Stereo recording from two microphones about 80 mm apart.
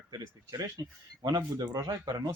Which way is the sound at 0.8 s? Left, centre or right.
Right.